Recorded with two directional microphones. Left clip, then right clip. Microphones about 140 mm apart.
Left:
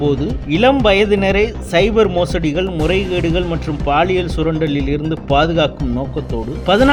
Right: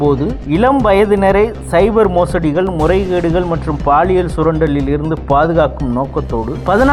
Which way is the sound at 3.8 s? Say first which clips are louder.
Right 4 dB; 20° left (ahead or behind).